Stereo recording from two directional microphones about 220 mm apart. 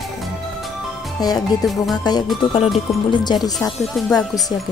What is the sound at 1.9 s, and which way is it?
Music, 20° left (ahead or behind).